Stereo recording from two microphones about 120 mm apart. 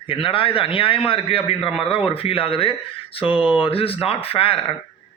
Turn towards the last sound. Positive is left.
turn(degrees=50)  # may be behind; listen again after turning